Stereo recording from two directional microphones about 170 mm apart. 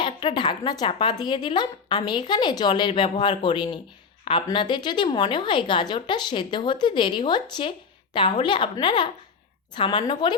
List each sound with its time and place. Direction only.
0.0 s speech: 30° left (ahead or behind)